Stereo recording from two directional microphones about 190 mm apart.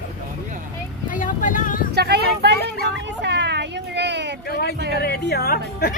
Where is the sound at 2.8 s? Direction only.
70° right (ahead or behind).